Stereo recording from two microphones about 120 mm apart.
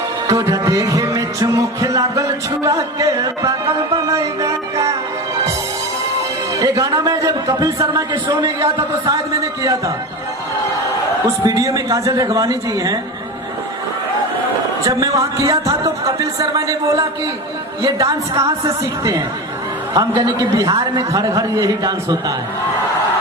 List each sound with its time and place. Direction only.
0.3 s speech: 30° right (ahead or behind)
3.9 s music: 25° right (ahead or behind)
6.5 s a man's voice: 30° right (ahead or behind)
8.4 s speech: 25° right (ahead or behind)
11.4 s speech: 25° right (ahead or behind)
14.8 s speech: 25° right (ahead or behind)
19.9 s a man's voice: 30° right (ahead or behind)